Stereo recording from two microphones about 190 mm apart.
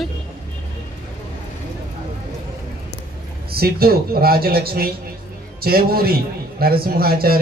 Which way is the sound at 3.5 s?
55° right (ahead or behind).